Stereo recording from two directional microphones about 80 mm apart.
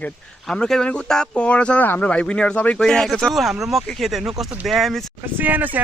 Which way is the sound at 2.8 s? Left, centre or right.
Centre.